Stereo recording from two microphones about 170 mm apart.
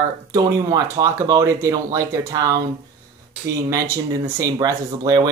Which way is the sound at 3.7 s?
20° right (ahead or behind).